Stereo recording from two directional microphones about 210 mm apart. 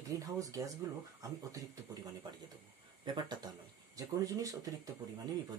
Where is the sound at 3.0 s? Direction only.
20° right (ahead or behind).